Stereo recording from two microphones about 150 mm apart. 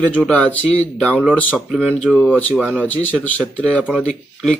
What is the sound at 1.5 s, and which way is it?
Speech, 5° right (ahead or behind).